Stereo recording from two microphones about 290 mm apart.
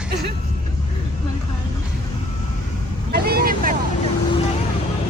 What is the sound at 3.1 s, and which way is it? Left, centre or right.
Speech, right.